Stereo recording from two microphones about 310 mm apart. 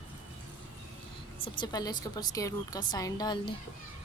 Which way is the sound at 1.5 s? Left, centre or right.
Centre.